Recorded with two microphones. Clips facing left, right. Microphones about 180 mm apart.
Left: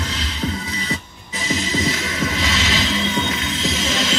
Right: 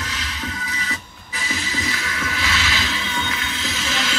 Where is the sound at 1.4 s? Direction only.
25° left (ahead or behind).